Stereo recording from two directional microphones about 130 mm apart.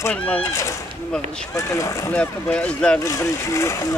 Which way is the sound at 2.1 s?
10° left (ahead or behind).